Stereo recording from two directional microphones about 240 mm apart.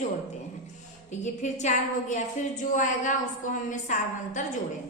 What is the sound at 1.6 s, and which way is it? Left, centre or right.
A woman's voice, left.